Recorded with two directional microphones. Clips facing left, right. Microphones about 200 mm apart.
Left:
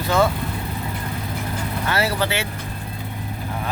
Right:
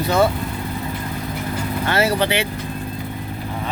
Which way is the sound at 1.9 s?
20° right (ahead or behind).